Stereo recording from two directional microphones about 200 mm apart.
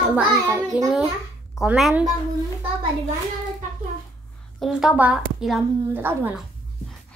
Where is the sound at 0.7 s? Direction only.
5° right (ahead or behind).